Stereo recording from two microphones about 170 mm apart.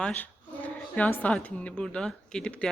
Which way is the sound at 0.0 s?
10° left (ahead or behind).